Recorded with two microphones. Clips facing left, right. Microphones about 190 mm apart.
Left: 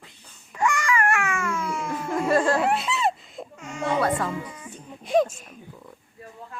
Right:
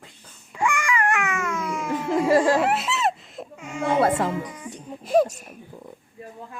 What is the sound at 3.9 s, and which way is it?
Music, 25° right (ahead or behind).